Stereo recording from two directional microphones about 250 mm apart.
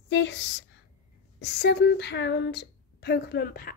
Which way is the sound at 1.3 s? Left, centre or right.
Left.